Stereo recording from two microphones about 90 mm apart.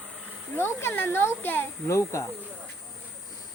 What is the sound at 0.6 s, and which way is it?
Speech, 30° left (ahead or behind).